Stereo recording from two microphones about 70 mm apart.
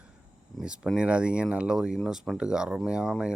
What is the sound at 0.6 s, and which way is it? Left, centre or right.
Speech, centre.